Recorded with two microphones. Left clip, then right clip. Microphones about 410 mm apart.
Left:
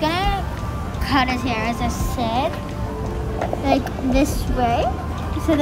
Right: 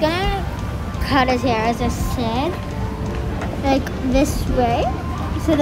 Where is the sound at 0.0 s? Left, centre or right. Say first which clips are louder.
Right 1 dB; centre.